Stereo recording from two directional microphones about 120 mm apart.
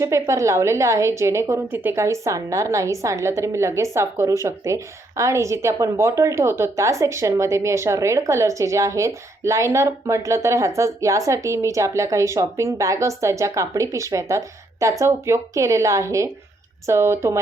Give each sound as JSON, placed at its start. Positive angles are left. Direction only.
{"t": 0.0, "sound": "a woman's voice", "side_deg": -25}